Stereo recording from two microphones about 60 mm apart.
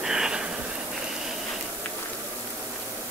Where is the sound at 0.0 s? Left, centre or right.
Centre.